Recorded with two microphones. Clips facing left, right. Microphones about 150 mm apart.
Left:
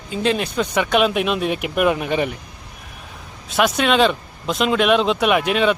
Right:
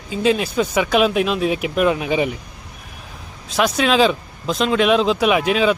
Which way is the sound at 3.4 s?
Centre (ahead or behind).